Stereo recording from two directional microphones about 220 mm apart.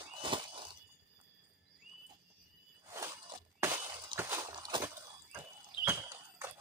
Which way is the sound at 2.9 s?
15° right (ahead or behind).